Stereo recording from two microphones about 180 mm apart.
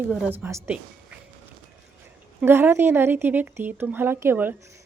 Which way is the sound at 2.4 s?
15° right (ahead or behind).